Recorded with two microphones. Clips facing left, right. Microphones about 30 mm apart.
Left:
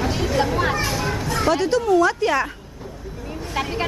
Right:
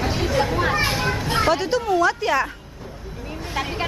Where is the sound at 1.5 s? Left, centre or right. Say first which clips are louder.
Left 4 dB; centre.